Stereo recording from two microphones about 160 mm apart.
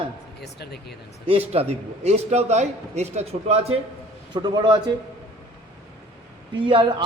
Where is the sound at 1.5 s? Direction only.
40° right (ahead or behind).